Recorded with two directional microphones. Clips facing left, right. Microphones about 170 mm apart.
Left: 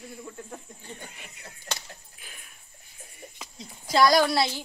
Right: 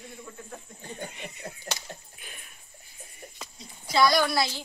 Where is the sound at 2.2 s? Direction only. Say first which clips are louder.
Right 2 dB; centre (ahead or behind).